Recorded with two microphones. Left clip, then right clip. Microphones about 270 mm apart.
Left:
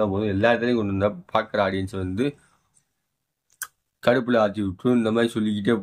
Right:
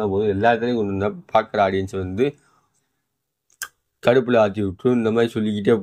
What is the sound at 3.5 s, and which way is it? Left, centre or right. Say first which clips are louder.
A man's voice: right 4 dB; centre.